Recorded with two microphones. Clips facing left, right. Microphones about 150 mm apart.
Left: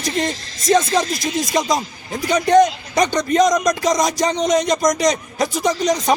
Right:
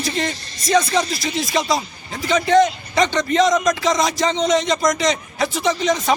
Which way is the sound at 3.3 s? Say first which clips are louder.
Left 2 dB; 40° left (ahead or behind).